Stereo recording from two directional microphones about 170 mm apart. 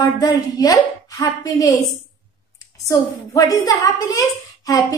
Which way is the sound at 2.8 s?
20° left (ahead or behind).